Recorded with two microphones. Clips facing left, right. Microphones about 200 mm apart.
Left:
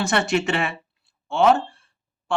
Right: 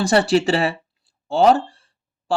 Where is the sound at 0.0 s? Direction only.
35° right (ahead or behind).